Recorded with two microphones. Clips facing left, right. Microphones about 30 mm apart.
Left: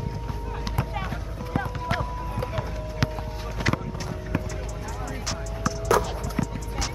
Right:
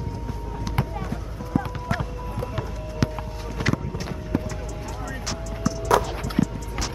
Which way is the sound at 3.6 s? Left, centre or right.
Centre.